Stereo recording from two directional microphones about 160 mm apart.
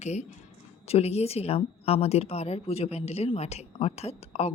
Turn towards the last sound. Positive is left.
turn(degrees=40)  # may be behind; listen again after turning